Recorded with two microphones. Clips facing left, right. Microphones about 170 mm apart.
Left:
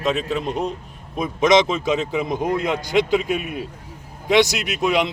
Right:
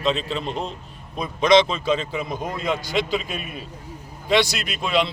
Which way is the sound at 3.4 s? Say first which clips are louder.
Left 6 dB; 75° left (ahead or behind).